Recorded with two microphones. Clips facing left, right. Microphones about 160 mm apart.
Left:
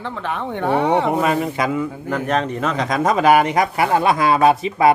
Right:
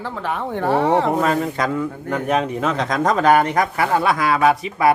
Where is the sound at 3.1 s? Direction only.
10° left (ahead or behind).